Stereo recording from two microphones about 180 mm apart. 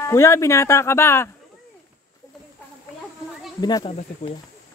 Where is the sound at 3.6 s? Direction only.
20° left (ahead or behind).